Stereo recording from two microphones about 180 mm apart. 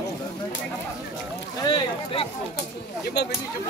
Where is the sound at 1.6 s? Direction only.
30° left (ahead or behind).